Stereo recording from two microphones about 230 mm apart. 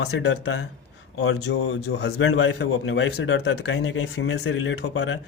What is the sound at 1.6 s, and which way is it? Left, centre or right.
Speech, left.